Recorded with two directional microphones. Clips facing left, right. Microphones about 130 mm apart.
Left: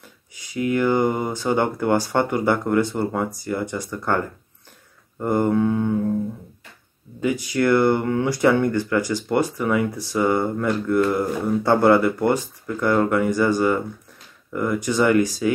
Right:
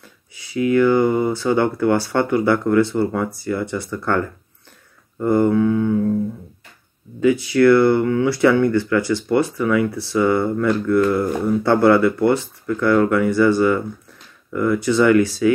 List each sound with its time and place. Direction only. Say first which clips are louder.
0.7 s mantra: right 4 dB; 20° left (ahead or behind)
1.2 s speech: right 4 dB; 15° left (ahead or behind)
5.2 s speech: right 4 dB; 15° left (ahead or behind)
5.5 s mantra: right 3 dB; 30° left (ahead or behind)
7.5 s speech: right 4 dB; 15° left (ahead or behind)
9.6 s mantra: right 3 dB; 30° left (ahead or behind)
9.8 s speech: right 3 dB; 15° left (ahead or behind)